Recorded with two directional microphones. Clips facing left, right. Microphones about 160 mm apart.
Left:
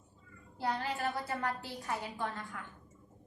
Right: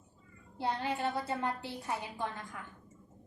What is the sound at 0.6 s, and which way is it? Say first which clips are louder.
A woman's voice: right 1 dB; 20° right (ahead or behind).